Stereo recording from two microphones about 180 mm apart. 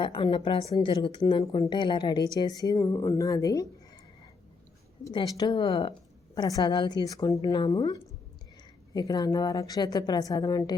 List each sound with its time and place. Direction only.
0.0 s speech: 25° left (ahead or behind)
5.0 s speech: 20° left (ahead or behind)